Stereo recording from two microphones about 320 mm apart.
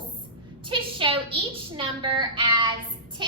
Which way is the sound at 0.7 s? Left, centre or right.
Centre.